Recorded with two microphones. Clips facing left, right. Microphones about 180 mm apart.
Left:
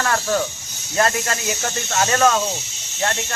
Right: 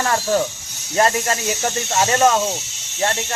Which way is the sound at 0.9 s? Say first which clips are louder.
Right 2 dB; 30° right (ahead or behind).